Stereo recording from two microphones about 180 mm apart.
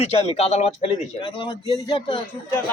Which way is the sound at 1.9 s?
25° left (ahead or behind).